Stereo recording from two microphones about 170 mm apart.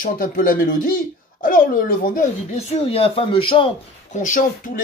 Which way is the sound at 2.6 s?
35° left (ahead or behind).